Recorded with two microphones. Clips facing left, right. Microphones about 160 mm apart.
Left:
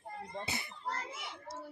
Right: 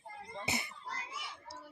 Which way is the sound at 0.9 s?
50° left (ahead or behind).